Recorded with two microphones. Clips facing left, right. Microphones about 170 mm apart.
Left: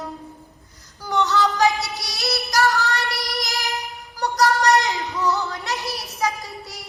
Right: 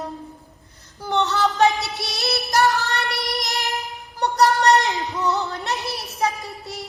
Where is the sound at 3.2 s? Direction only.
20° right (ahead or behind).